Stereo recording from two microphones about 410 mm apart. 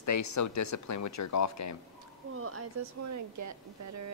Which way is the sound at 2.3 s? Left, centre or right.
Right.